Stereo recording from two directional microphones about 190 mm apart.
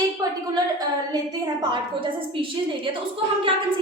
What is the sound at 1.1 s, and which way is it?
A woman's voice, 20° right (ahead or behind).